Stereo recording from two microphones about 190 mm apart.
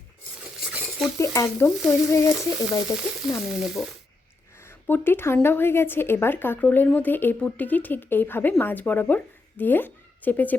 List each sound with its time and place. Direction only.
0.7 s stir: centre (ahead or behind)
1.2 s speech: 15° left (ahead or behind)
3.4 s speech: centre (ahead or behind)
4.6 s speech: 10° left (ahead or behind)